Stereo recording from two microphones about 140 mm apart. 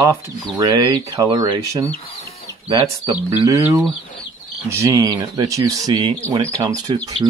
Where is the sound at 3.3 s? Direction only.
20° right (ahead or behind).